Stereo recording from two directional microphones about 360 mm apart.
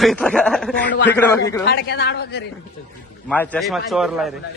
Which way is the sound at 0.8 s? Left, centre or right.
Left.